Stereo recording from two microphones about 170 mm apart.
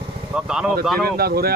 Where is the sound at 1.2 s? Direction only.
65° right (ahead or behind).